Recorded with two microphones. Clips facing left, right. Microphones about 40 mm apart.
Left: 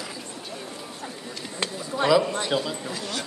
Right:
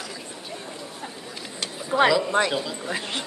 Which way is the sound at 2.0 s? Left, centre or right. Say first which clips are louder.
Left 4 dB; centre.